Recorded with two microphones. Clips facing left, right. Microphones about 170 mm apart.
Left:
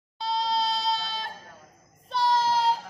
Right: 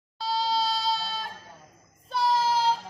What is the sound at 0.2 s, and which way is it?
Goat, centre (ahead or behind).